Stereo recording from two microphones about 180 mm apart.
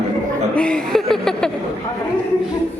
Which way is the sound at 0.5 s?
5° left (ahead or behind).